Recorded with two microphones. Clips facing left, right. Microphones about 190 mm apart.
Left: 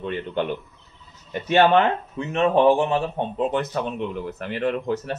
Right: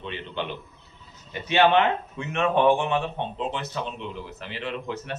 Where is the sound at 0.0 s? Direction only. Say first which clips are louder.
Left 7 dB; 50° left (ahead or behind).